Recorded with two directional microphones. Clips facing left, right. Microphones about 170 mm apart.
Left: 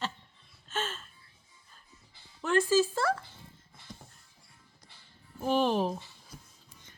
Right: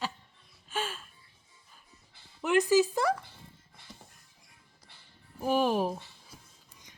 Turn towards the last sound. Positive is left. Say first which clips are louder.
# even
turn(degrees=-10)  # may be behind; listen again after turning